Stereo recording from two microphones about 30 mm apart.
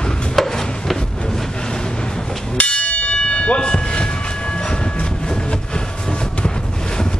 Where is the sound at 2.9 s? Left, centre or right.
Left.